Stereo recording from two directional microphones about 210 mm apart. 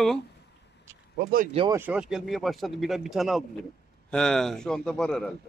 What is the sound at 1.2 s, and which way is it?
Speech, 45° right (ahead or behind).